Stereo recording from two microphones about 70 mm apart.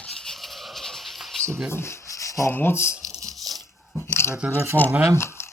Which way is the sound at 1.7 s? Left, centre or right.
Left.